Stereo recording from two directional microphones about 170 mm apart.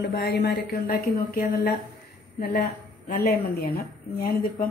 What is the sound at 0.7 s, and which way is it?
A woman's voice, 55° left (ahead or behind).